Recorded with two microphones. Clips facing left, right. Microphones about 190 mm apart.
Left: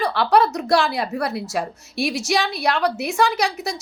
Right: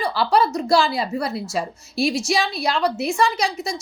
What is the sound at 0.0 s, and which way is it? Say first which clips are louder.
A woman's voice: left 2 dB; centre (ahead or behind).